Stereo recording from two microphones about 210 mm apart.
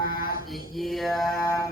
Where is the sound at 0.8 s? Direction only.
Centre (ahead or behind).